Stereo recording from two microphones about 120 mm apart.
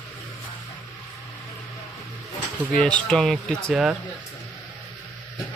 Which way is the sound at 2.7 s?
5° left (ahead or behind).